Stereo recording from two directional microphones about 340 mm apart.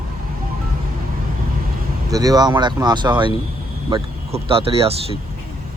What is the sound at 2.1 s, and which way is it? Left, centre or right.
Speech, centre.